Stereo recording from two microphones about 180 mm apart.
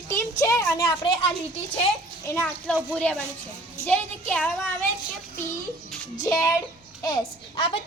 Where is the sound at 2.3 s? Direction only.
10° left (ahead or behind).